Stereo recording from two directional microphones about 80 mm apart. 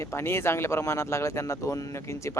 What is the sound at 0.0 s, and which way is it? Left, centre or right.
Speech, left.